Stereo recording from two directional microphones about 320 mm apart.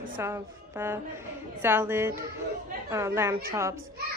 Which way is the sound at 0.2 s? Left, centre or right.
Centre.